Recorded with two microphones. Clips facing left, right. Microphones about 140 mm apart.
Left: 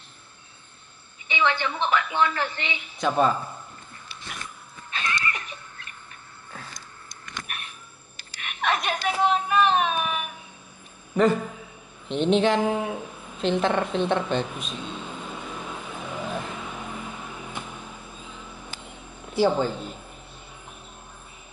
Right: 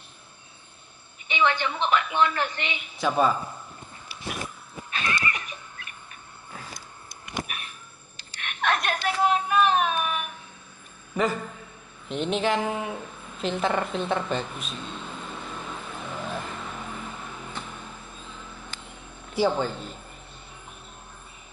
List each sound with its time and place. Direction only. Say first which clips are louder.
1.3 s a woman's voice: even; 15° right (ahead or behind)
3.0 s a man's voice: left 1 dB; 5° right (ahead or behind)
4.9 s neigh: even; 10° right (ahead or behind)
7.4 s a sound: even; centre (ahead or behind)
11.1 s a man's voice: left 5 dB; centre (ahead or behind)
12.1 s a sound: left 4 dB; 5° right (ahead or behind)
19.3 s speech: left 2 dB; centre (ahead or behind)